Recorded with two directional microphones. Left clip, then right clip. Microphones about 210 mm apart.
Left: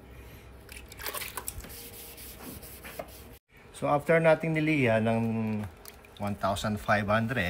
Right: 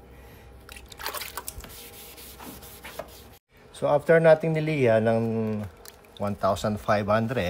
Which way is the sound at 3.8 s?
55° right (ahead or behind).